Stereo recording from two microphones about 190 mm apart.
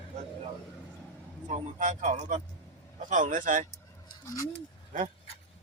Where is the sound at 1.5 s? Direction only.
40° right (ahead or behind).